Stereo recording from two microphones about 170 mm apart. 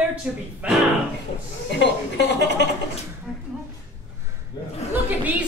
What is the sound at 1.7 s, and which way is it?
Speech, 85° left.